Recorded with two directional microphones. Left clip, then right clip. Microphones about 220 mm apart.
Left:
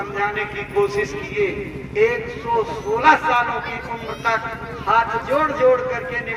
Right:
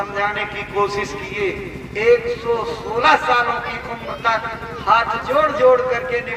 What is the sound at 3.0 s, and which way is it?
A man's voice, 15° right (ahead or behind).